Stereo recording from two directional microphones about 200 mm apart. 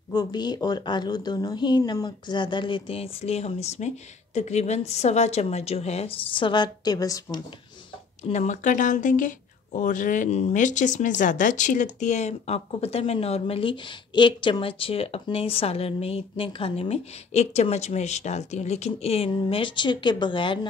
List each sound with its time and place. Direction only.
0.1 s speech: 20° left (ahead or behind)
8.2 s speech: 35° left (ahead or behind)